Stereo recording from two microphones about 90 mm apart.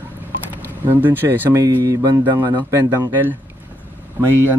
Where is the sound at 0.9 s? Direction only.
20° right (ahead or behind).